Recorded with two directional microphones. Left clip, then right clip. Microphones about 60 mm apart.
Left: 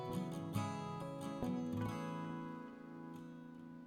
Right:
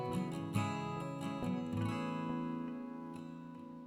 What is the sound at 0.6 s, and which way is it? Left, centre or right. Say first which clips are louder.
Music: right 5 dB; right.